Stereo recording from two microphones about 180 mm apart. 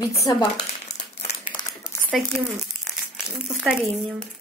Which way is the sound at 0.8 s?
40° left (ahead or behind).